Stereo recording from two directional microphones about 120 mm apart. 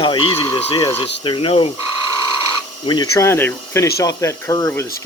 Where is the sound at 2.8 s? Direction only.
35° left (ahead or behind).